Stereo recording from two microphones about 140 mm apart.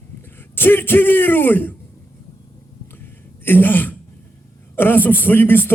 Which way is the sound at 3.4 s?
15° left (ahead or behind).